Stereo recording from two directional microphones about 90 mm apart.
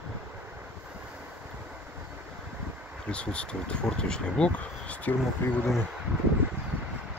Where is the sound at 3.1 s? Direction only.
10° left (ahead or behind).